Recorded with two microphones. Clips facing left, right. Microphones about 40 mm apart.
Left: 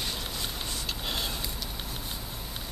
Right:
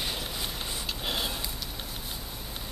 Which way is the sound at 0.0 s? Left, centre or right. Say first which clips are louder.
Right 1 dB; centre.